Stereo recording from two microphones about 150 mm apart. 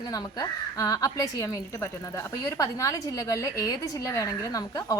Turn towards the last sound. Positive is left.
turn(degrees=25)  # may be behind; listen again after turning